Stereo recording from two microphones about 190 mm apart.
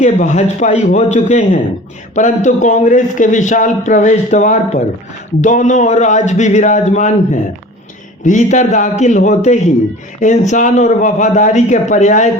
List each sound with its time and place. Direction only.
0.0 s a man's voice: 40° left (ahead or behind)
8.2 s a man's voice: 40° left (ahead or behind)